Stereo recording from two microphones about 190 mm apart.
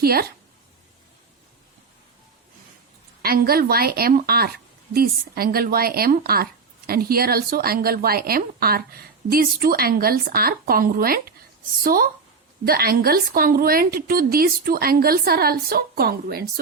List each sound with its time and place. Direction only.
0.0 s speech: 55° right (ahead or behind)
3.2 s speech: 55° right (ahead or behind)